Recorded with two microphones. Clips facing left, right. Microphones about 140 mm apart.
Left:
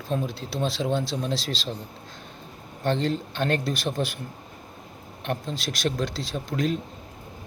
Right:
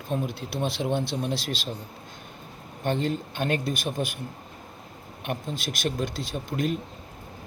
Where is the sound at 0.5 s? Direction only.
55° right (ahead or behind).